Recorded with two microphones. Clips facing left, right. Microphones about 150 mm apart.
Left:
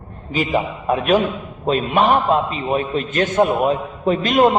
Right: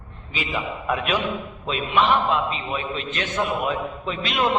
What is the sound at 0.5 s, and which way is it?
A man's voice, 40° left (ahead or behind).